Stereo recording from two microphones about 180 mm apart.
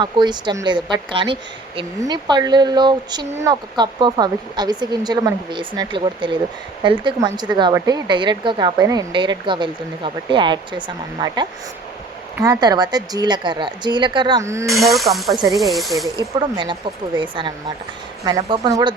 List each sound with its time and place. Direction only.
0.0 s a woman's voice: 25° right (ahead or behind)
14.7 s speech: centre (ahead or behind)
16.6 s a woman's voice: 25° right (ahead or behind)